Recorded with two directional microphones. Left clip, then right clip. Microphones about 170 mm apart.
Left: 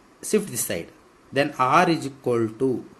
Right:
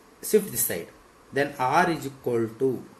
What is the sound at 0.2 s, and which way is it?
Speech, 55° left (ahead or behind).